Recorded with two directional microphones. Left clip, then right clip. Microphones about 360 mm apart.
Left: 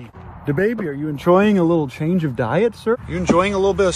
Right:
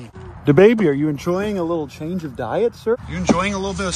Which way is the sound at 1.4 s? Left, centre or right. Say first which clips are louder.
Left 5 dB; left.